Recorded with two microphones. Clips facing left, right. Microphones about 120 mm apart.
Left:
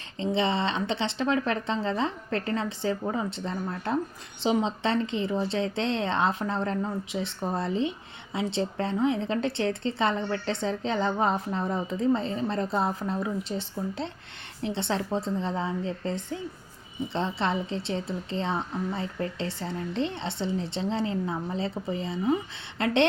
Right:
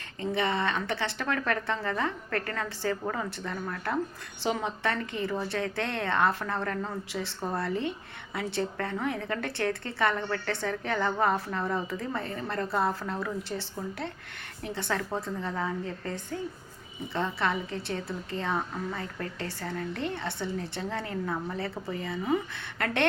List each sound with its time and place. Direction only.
0.2 s speech: 25° left (ahead or behind)